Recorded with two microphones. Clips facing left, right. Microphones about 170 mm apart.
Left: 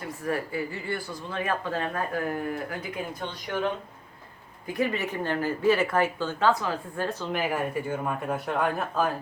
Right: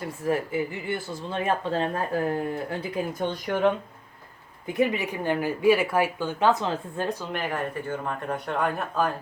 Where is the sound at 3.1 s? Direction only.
50° right (ahead or behind).